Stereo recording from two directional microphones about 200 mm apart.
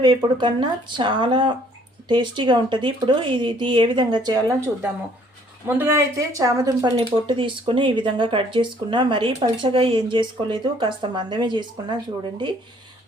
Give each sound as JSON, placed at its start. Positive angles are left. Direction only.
{"t": 0.0, "sound": "speech", "side_deg": -20}